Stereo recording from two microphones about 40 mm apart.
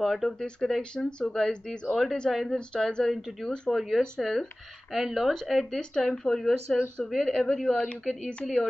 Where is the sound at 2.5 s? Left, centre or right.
Centre.